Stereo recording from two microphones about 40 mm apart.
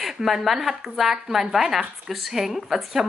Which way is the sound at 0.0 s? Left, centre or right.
Centre.